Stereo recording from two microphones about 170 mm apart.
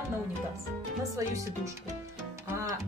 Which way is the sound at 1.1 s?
20° right (ahead or behind).